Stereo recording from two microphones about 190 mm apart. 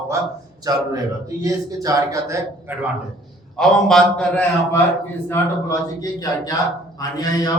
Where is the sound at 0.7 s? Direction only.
20° right (ahead or behind).